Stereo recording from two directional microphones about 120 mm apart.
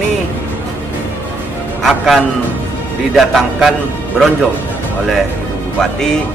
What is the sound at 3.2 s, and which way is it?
Speech, centre (ahead or behind).